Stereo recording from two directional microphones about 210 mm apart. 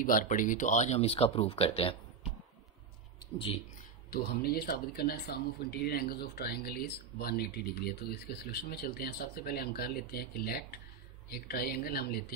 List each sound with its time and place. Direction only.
0.0 s speech: 40° left (ahead or behind)
4.1 s speech: 50° left (ahead or behind)